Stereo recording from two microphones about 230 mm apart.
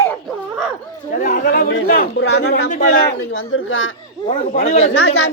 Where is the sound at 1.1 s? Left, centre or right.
Left.